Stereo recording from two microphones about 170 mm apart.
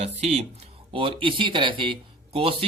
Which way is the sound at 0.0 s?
40° right (ahead or behind).